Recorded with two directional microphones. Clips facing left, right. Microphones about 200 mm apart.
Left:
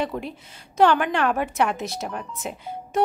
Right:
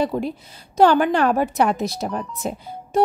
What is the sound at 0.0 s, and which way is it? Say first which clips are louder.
A woman's voice: right 5 dB; 35° right (ahead or behind).